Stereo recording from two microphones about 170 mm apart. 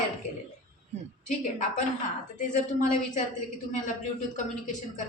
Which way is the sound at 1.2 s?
45° left (ahead or behind).